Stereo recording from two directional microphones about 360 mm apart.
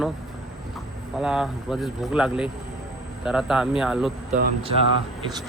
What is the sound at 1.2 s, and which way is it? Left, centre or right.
Speech, centre.